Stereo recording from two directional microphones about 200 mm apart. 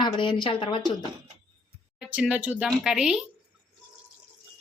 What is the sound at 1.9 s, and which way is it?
Speech, 5° right (ahead or behind).